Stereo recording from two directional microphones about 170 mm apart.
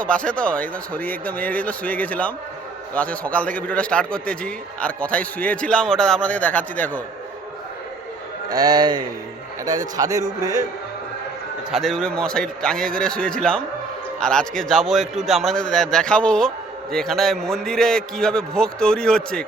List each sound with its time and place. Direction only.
0.1 s a man's voice: 5° left (ahead or behind)
8.4 s a man's voice: 20° right (ahead or behind)
11.7 s a man's voice: centre (ahead or behind)